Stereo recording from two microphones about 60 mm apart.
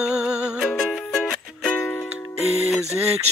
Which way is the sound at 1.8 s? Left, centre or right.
Left.